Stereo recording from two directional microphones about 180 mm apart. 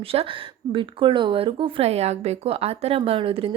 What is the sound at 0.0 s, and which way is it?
A woman's voice, 30° right (ahead or behind).